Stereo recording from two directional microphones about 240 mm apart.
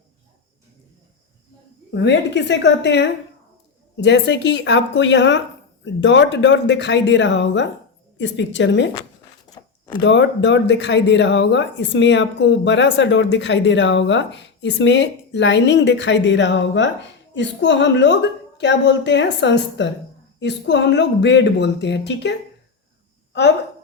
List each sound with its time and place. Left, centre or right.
1.9 s speech: left
9.5 s a sound: centre
10.0 s speech: left